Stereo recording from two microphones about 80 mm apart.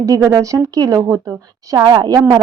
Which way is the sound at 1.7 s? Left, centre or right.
Right.